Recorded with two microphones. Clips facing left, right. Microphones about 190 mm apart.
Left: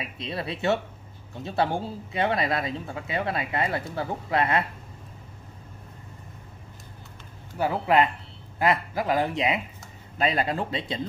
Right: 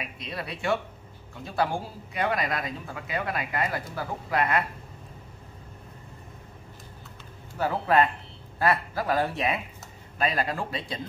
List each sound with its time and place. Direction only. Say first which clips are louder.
0.0 s speech: left 3 dB; 25° left (ahead or behind)
7.5 s a man's voice: left 1 dB; 15° left (ahead or behind)